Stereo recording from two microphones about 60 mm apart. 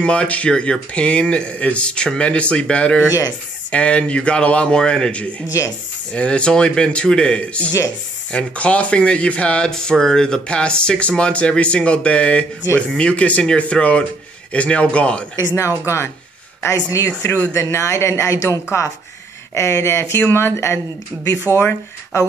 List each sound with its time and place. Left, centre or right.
0.0 s speech: centre
3.1 s speech: left
3.7 s a man's voice: centre
15.8 s speech: left
16.6 s speech: left
19.5 s speech: left
20.2 s speech: left